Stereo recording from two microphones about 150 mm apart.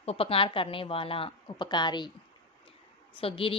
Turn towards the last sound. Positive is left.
turn(degrees=35)  # may be behind; listen again after turning